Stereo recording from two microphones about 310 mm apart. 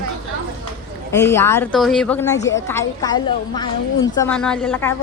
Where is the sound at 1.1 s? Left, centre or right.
Centre.